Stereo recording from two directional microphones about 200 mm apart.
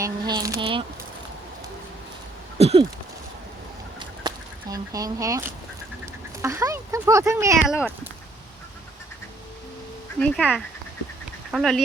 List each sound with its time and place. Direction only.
0.0 s speech: 20° right (ahead or behind)
2.6 s a sound: 30° right (ahead or behind)
4.0 s a sound: 20° right (ahead or behind)
6.4 s speech: 15° right (ahead or behind)
7.7 s speech: 5° right (ahead or behind)
10.2 s speech: 5° left (ahead or behind)
11.5 s speech: centre (ahead or behind)